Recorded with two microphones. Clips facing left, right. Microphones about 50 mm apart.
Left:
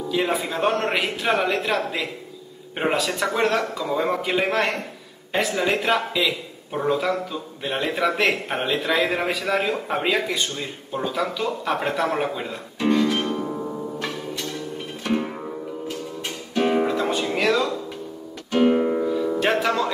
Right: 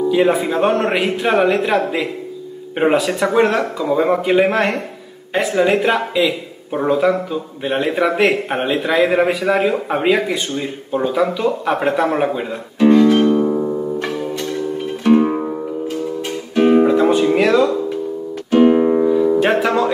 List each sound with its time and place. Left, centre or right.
0.1 s a man's voice: centre
13.7 s music: centre
16.5 s music: centre